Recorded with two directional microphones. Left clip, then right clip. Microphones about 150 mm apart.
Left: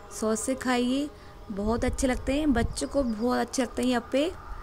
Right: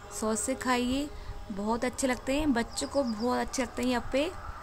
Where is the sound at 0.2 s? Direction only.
15° left (ahead or behind).